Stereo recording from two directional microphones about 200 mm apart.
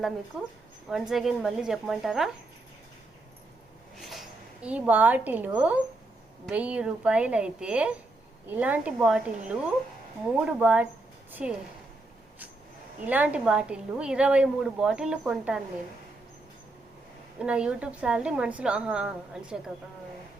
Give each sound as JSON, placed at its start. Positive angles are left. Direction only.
{"t": 0.9, "sound": "a woman's voice", "side_deg": 0}
{"t": 4.1, "sound": "a woman's voice", "side_deg": -5}
{"t": 13.1, "sound": "a woman's voice", "side_deg": -5}
{"t": 17.4, "sound": "a woman's voice", "side_deg": -5}